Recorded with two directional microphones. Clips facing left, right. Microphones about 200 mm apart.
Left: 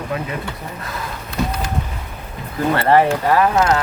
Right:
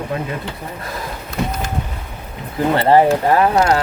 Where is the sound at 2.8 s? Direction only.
20° right (ahead or behind).